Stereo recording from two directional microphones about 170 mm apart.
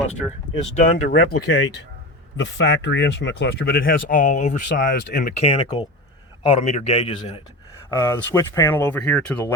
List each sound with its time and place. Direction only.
0.2 s speech: 5° right (ahead or behind)
0.8 s speech: 45° left (ahead or behind)
1.4 s speech: 85° left; by 5.3 s 65° left (ahead or behind)
5.3 s a man's voice: 35° left (ahead or behind)
7.9 s speech: 20° left (ahead or behind)